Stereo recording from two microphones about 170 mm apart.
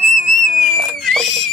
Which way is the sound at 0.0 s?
45° right (ahead or behind).